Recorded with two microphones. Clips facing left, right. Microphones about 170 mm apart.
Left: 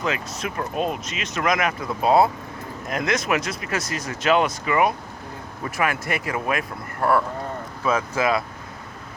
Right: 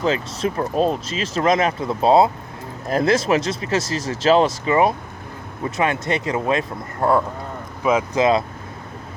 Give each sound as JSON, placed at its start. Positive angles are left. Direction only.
{"t": 0.0, "sound": "speech", "side_deg": -30}